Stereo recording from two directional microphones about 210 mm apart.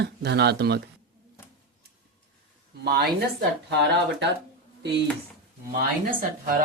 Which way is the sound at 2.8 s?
50° right (ahead or behind).